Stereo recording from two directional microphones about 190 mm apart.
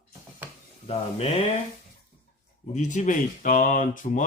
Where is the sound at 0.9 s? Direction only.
30° left (ahead or behind).